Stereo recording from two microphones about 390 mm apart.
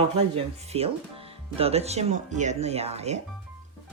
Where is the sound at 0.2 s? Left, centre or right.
Centre.